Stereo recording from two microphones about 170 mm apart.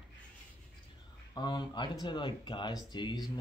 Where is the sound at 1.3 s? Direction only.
25° left (ahead or behind).